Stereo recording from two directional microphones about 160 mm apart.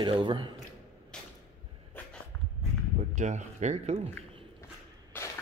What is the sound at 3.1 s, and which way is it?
Speech, 50° right (ahead or behind).